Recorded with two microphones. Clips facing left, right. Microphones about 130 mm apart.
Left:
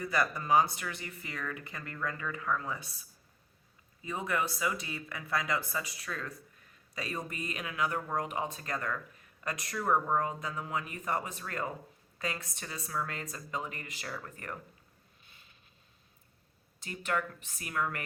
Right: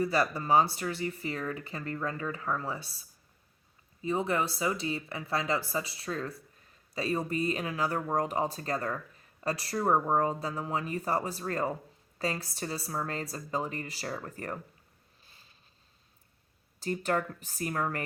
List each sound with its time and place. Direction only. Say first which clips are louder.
0.0 s speech: right 4 dB; 30° right (ahead or behind)
15.2 s a sound: right 1 dB; 35° right (ahead or behind)
16.8 s speech: right 4 dB; 35° right (ahead or behind)